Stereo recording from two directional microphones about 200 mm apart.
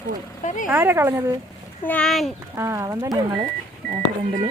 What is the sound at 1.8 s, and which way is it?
Speech, 5° left (ahead or behind).